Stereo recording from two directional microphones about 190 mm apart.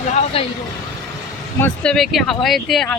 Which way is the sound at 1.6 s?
5° left (ahead or behind).